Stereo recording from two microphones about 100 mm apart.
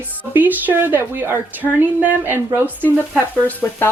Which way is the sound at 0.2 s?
15° right (ahead or behind).